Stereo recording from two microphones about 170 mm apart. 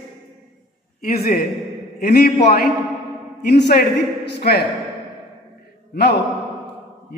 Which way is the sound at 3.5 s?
75° left (ahead or behind).